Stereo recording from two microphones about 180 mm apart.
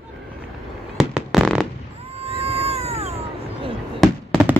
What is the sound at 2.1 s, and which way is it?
Whale vocalization, 35° right (ahead or behind).